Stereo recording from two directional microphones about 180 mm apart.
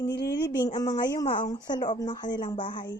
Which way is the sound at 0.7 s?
20° left (ahead or behind).